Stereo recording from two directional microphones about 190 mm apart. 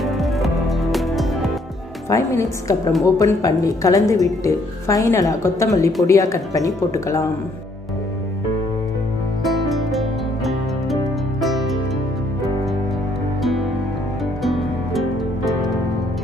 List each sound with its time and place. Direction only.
0.0 s music: centre (ahead or behind)
2.0 s a woman's voice: 15° left (ahead or behind)
9.4 s music: centre (ahead or behind)
14.4 s music: centre (ahead or behind)